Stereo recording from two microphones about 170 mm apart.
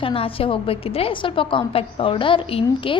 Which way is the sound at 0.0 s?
35° left (ahead or behind).